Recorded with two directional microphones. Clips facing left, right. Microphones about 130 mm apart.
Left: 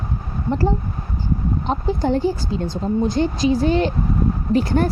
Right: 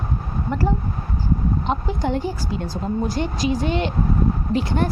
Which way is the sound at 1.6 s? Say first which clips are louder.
Left 6 dB; 35° left (ahead or behind).